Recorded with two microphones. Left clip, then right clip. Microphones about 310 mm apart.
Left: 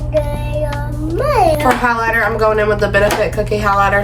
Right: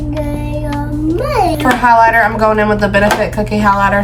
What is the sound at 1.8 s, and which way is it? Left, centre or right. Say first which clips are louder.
Speech: right 6 dB; centre.